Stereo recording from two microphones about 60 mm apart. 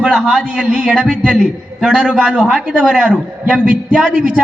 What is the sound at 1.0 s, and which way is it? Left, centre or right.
Speech, centre.